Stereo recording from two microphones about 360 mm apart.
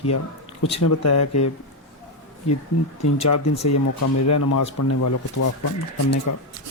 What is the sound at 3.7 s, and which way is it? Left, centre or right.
Speech, left.